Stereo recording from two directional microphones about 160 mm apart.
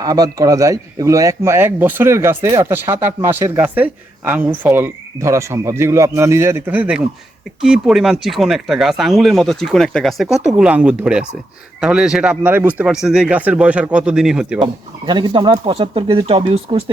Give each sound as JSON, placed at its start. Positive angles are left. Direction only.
{"t": 0.0, "sound": "speech", "side_deg": -25}
{"t": 14.6, "sound": "speech", "side_deg": -30}